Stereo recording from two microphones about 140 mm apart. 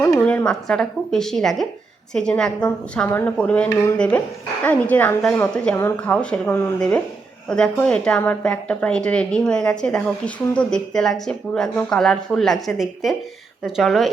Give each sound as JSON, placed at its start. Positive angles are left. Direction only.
{"t": 0.2, "sound": "a woman's voice", "side_deg": 10}